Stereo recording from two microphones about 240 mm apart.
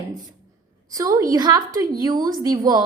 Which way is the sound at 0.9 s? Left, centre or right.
Centre.